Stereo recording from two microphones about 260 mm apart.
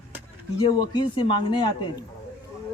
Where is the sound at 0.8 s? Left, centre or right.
Centre.